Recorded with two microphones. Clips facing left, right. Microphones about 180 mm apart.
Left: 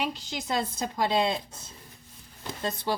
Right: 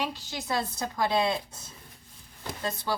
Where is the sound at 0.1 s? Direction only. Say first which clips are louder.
Left 1 dB; 20° left (ahead or behind).